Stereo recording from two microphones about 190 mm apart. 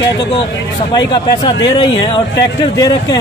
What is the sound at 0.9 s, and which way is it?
A man's voice, 20° left (ahead or behind).